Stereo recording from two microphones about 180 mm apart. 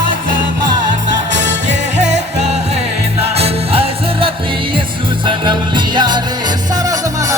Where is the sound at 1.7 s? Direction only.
40° right (ahead or behind).